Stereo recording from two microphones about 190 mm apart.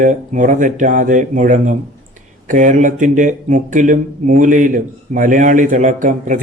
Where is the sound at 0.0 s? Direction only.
40° right (ahead or behind).